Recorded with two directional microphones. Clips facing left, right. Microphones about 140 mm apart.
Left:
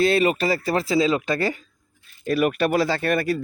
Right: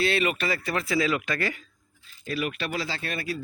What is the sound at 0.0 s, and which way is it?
Speech, 40° left (ahead or behind).